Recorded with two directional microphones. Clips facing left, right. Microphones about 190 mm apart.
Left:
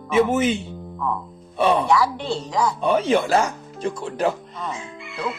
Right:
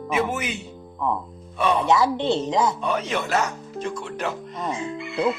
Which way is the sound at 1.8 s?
20° right (ahead or behind).